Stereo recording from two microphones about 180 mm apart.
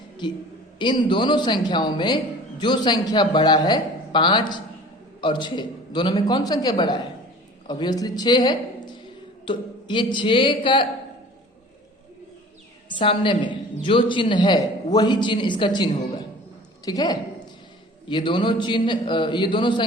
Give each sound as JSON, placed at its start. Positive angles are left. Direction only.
{"t": 0.2, "sound": "a man's voice", "side_deg": 25}
{"t": 13.0, "sound": "a man's voice", "side_deg": 25}